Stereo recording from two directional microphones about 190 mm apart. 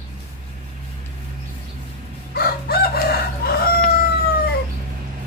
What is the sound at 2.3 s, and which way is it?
Chicken, 55° left (ahead or behind).